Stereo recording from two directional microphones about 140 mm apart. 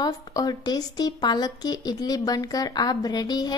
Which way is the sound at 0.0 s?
25° left (ahead or behind).